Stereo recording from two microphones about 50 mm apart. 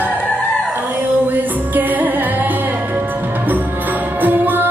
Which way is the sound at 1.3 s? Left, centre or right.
Right.